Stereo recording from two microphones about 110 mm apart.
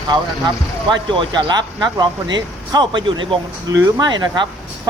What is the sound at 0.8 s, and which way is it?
Speech, 45° right (ahead or behind).